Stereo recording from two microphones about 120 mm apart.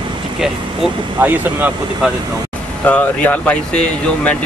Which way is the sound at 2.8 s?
15° left (ahead or behind).